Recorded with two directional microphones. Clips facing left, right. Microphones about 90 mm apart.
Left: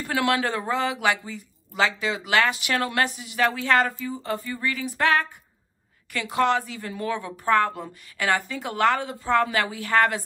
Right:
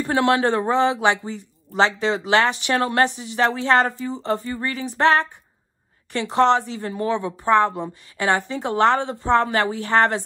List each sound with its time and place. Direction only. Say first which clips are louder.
0.0 s a woman's voice: right 5 dB; 30° right (ahead or behind)